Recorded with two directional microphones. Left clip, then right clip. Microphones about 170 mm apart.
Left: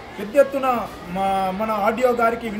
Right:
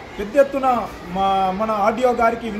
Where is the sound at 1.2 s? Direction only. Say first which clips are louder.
Right 3 dB; 5° left (ahead or behind).